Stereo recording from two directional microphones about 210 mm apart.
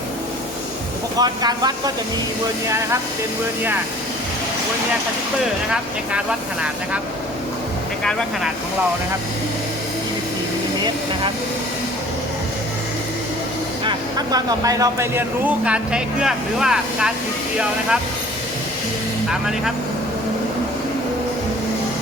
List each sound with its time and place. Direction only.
1.2 s speech: 20° right (ahead or behind)
5.7 s speech: 5° right (ahead or behind)
13.8 s speech: 20° right (ahead or behind); by 17.1 s 5° right (ahead or behind)
19.3 s speech: centre (ahead or behind)